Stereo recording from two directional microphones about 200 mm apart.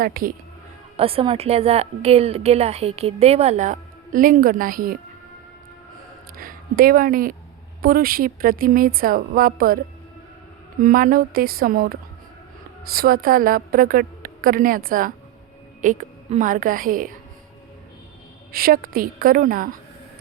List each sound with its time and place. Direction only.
0.0 s a woman's voice: 45° right (ahead or behind)
0.9 s a woman's voice: 30° right (ahead or behind); by 4.9 s 45° right (ahead or behind)
6.3 s a woman's voice: 45° right (ahead or behind)
18.5 s a woman's voice: 45° right (ahead or behind)